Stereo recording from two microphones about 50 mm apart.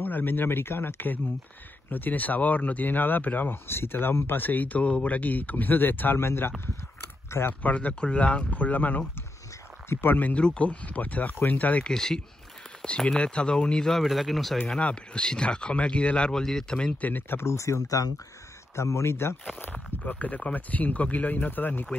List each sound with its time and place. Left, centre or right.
0.0 s speech: left
3.6 s speech: left
4.4 s speech: left
7.6 s speech: left
10.3 s speech: left
11.8 s speech: centre
13.8 s speech: centre
14.8 s speech: left
17.0 s speech: left
17.4 s speech: left
19.6 s speech: left